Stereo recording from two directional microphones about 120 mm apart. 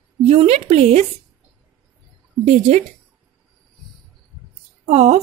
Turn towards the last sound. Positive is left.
turn(degrees=-60)  # may be behind; listen again after turning